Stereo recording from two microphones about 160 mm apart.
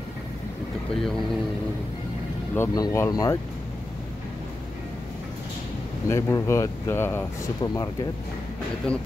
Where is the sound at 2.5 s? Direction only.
20° left (ahead or behind).